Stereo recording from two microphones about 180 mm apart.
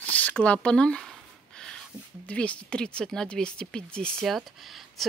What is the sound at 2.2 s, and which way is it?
Speech, 5° left (ahead or behind).